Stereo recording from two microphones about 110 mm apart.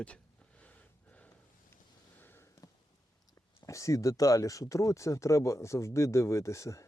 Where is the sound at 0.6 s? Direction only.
15° left (ahead or behind).